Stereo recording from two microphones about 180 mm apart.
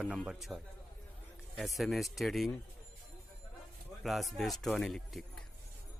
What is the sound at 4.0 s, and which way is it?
Speech, centre (ahead or behind).